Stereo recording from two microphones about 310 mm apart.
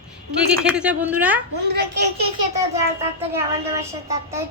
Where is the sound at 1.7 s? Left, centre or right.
Right.